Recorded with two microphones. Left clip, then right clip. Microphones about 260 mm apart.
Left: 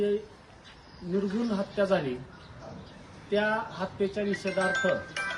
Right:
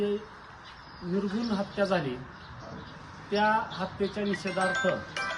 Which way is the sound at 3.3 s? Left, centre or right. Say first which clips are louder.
Right 2 dB; centre.